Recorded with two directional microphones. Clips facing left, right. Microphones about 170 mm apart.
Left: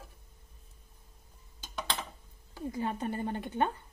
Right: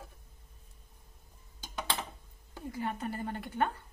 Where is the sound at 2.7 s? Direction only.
25° left (ahead or behind).